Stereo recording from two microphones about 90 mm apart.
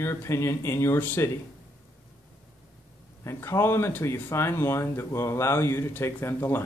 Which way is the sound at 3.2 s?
30° left (ahead or behind).